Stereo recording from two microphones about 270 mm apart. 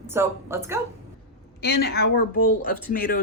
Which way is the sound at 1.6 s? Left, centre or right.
Left.